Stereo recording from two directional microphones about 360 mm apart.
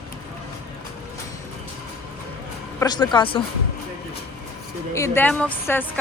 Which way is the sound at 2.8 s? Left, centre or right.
Centre.